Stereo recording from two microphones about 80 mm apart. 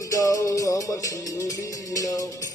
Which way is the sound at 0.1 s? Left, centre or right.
Left.